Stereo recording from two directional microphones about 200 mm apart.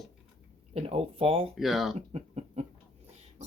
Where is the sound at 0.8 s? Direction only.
30° right (ahead or behind).